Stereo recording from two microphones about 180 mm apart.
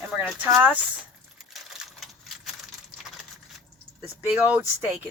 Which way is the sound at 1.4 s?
Centre (ahead or behind).